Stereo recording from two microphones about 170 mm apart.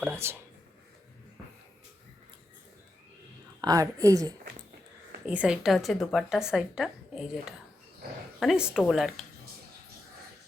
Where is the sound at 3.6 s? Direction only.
20° right (ahead or behind).